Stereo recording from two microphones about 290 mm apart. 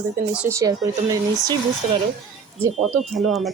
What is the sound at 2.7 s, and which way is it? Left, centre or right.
Speech, centre.